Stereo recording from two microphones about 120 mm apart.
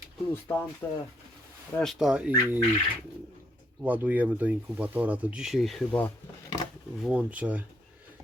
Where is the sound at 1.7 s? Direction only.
Centre (ahead or behind).